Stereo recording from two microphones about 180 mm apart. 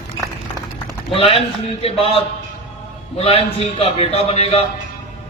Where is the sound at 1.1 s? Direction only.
30° left (ahead or behind).